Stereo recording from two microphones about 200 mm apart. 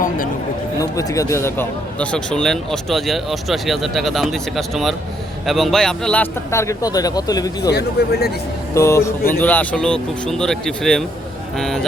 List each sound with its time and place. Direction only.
0.8 s a man's voice: 15° left (ahead or behind)
7.7 s speech: 55° left (ahead or behind)
8.7 s a man's voice: 15° left (ahead or behind)